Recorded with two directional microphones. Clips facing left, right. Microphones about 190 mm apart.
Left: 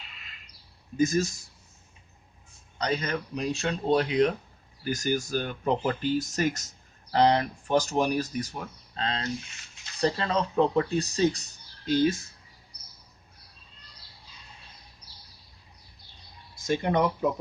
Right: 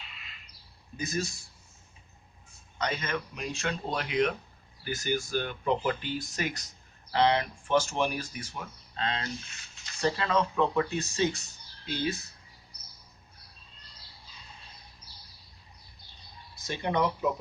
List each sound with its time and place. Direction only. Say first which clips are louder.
0.9 s speech: left 9 dB; 45° left (ahead or behind)
2.7 s speech: left 3 dB; 35° left (ahead or behind)
16.6 s speech: left 4 dB; 50° left (ahead or behind)